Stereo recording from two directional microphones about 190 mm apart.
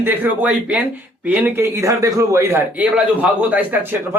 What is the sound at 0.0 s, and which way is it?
A man's voice, 10° right (ahead or behind).